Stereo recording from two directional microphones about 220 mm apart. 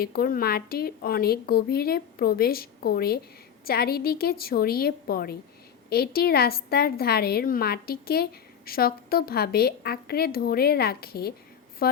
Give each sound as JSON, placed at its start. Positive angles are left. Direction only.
{"t": 0.0, "sound": "a woman's voice", "side_deg": 45}